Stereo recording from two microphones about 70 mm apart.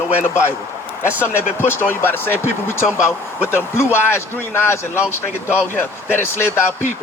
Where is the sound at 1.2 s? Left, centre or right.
Left.